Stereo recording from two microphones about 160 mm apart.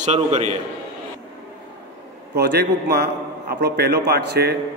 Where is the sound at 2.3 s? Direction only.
85° right.